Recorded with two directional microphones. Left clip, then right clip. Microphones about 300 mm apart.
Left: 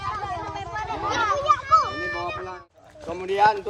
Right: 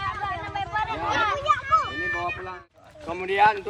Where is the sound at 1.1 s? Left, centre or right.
Centre.